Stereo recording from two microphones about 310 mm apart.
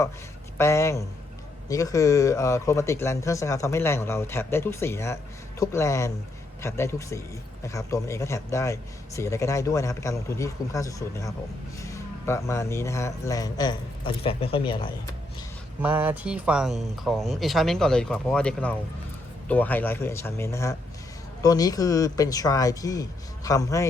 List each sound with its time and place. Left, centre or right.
0.6 s speech: centre
15.8 s speech: centre